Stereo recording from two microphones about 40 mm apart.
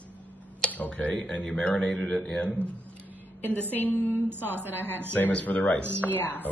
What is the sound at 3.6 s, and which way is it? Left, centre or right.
Speech, left.